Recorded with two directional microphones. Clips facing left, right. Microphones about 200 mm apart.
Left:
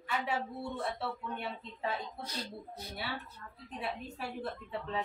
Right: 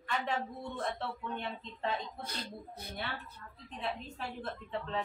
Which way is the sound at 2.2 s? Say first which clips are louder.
Left 1 dB; 55° right (ahead or behind).